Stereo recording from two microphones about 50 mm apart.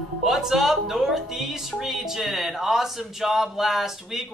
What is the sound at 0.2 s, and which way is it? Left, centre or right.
Speech, centre.